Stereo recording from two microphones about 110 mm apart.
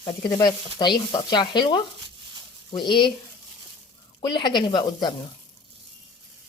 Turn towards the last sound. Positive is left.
turn(degrees=40)  # may be behind; listen again after turning